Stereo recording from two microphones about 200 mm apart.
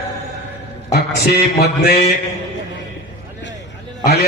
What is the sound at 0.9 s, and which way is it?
A man's voice, 50° left (ahead or behind).